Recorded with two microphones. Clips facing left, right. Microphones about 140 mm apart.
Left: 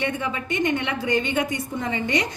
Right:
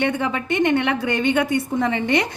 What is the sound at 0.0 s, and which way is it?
A woman's voice, 65° right (ahead or behind).